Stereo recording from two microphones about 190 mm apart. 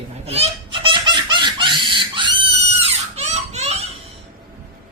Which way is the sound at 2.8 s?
35° right (ahead or behind).